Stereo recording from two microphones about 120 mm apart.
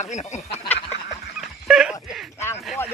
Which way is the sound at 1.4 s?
5° right (ahead or behind).